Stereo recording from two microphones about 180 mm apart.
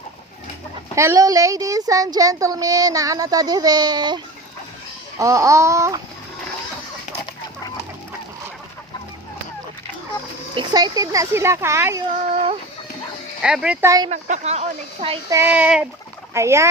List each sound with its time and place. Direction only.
0.9 s speech: 15° right (ahead or behind)
5.2 s speech: 15° right (ahead or behind)
10.5 s speech: 25° right (ahead or behind)
13.4 s speech: 5° right (ahead or behind)
13.8 s speech: 20° right (ahead or behind)
14.1 s speech: 40° right (ahead or behind)
15.3 s speech: 10° right (ahead or behind)